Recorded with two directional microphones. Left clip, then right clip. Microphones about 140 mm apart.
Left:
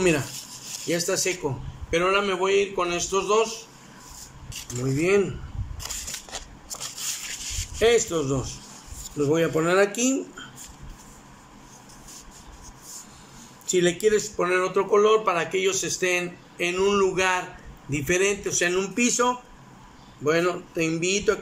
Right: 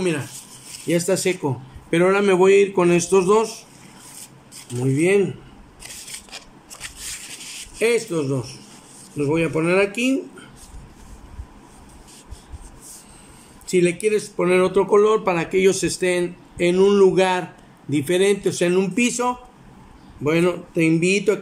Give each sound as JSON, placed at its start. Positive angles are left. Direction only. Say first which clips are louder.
{"t": 0.8, "sound": "a man's voice", "louder": "right 5 dB", "side_deg": -25}
{"t": 2.0, "sound": "a man's voice", "louder": "right 6 dB", "side_deg": -45}
{"t": 4.9, "sound": "speech", "louder": "right 4 dB", "side_deg": -20}
{"t": 7.8, "sound": "speech", "louder": "right 1 dB", "side_deg": -10}
{"t": 13.7, "sound": "speech", "louder": "right 2 dB", "side_deg": -10}